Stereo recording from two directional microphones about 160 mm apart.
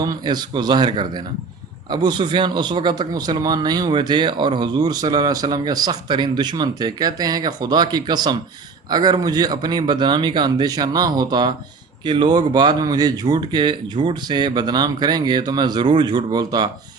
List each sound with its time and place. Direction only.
0.0 s speech: 25° right (ahead or behind)